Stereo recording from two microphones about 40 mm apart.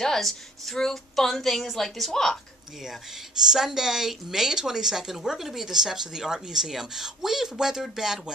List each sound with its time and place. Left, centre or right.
0.0 s a woman's voice: centre
3.4 s a woman's voice: centre